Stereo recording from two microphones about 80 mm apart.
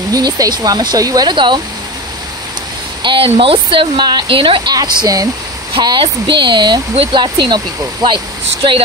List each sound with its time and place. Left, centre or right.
0.1 s speech: right
1.3 s speech: right
3.0 s speech: right
4.7 s speech: right
5.8 s speech: right